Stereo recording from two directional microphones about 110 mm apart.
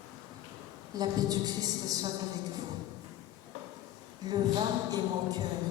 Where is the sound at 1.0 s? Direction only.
35° right (ahead or behind).